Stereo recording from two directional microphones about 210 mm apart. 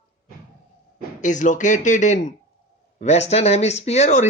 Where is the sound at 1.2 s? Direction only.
35° left (ahead or behind).